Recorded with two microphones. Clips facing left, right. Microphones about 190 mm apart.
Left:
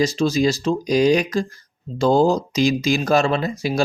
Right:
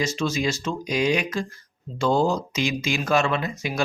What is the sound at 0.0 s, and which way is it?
Speech, 35° left (ahead or behind).